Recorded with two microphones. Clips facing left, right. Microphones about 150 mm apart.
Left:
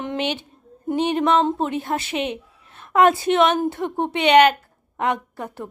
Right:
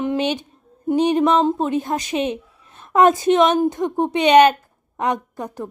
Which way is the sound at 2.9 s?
20° right (ahead or behind).